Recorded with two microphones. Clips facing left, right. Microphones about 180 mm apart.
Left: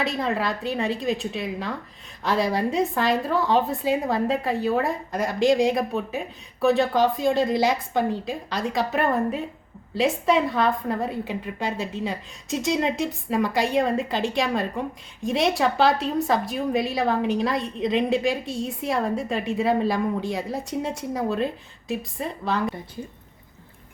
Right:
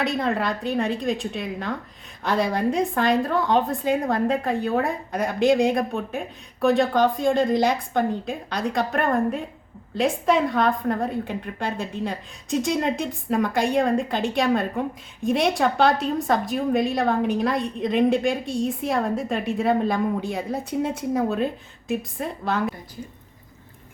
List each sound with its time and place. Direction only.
0.0 s a woman's voice: centre (ahead or behind)